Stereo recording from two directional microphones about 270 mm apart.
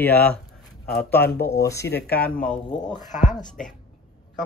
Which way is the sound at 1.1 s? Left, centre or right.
Left.